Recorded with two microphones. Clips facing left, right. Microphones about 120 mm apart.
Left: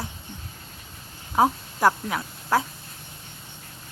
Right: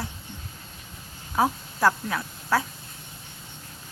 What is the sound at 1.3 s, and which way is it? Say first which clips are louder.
Speech: left 3 dB; 20° left (ahead or behind).